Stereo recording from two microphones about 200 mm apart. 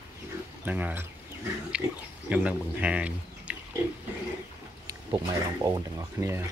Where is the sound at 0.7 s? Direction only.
10° right (ahead or behind).